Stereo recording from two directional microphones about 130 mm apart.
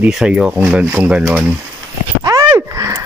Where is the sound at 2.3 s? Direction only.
25° right (ahead or behind).